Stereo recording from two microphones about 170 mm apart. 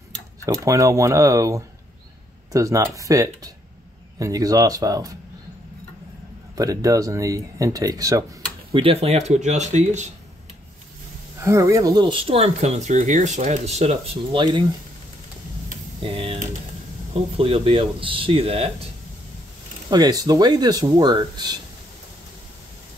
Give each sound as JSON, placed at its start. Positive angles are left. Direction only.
{"t": 0.5, "sound": "speech", "side_deg": -20}
{"t": 6.5, "sound": "speech", "side_deg": -20}
{"t": 8.7, "sound": "speech", "side_deg": -35}
{"t": 11.4, "sound": "speech", "side_deg": -15}
{"t": 14.3, "sound": "speech", "side_deg": -25}
{"t": 16.0, "sound": "speech", "side_deg": -30}
{"t": 19.9, "sound": "speech", "side_deg": -25}